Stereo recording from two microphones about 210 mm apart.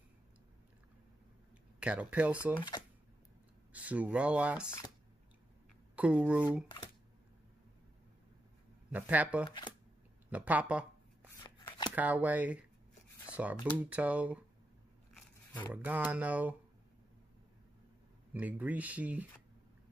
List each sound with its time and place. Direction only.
1.8 s speech: 5° right (ahead or behind)
3.7 s speech: 5° right (ahead or behind)
5.9 s speech: 5° right (ahead or behind)
8.9 s speech: 5° right (ahead or behind)
9.5 s speech: 20° left (ahead or behind)
10.3 s shuffling cards: 5° right (ahead or behind)
11.3 s shuffling cards: 20° left (ahead or behind)
11.9 s speech: 10° right (ahead or behind)
15.1 s a sound: 10° left (ahead or behind)
15.7 s speech: 10° right (ahead or behind)
18.3 s speech: 10° right (ahead or behind)